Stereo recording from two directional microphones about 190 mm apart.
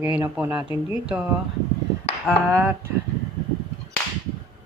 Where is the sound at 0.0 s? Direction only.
10° right (ahead or behind).